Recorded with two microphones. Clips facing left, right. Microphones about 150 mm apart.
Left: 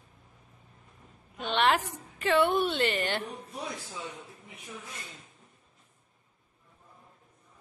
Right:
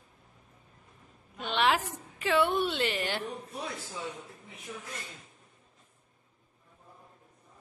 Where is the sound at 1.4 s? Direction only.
Centre (ahead or behind).